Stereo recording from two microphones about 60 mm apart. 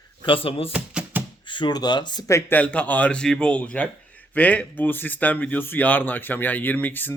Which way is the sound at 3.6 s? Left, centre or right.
Left.